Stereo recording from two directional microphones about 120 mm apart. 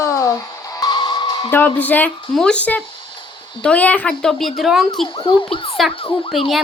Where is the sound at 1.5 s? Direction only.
15° left (ahead or behind).